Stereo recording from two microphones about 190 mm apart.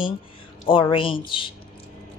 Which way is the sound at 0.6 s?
25° left (ahead or behind).